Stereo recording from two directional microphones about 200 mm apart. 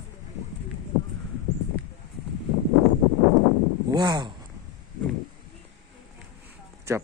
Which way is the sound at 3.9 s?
20° right (ahead or behind).